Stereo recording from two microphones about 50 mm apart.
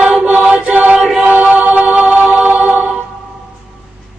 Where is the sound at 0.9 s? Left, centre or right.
Centre.